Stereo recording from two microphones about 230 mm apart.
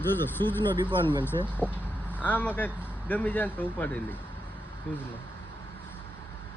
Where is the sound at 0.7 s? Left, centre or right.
Centre.